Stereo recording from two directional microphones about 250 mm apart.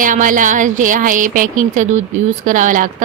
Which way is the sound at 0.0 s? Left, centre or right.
Right.